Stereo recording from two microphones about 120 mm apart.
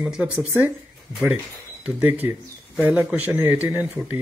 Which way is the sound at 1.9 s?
15° right (ahead or behind).